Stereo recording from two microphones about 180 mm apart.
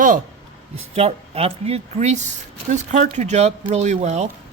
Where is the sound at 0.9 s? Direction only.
35° right (ahead or behind).